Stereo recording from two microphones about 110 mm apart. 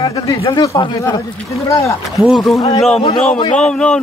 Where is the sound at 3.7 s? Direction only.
10° left (ahead or behind).